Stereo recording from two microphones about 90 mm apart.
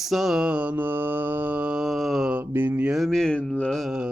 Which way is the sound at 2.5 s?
20° right (ahead or behind).